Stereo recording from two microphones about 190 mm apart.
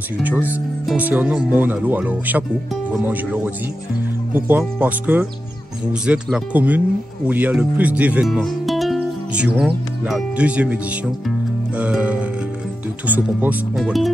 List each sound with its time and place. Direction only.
0.2 s speech: 10° right (ahead or behind)
4.3 s speech: 10° right (ahead or behind)
11.8 s music: 5° right (ahead or behind)
13.1 s speech: 10° right (ahead or behind)